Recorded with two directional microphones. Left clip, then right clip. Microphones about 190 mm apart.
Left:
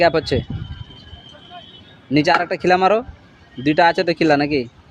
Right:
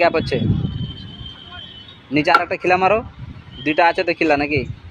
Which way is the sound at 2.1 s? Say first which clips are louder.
Right 1 dB; 20° left (ahead or behind).